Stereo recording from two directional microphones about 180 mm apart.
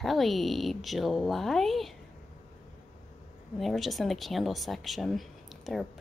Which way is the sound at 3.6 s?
Centre (ahead or behind).